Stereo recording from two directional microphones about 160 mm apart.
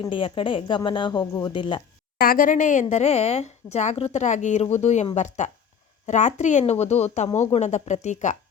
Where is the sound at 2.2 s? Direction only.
65° left (ahead or behind).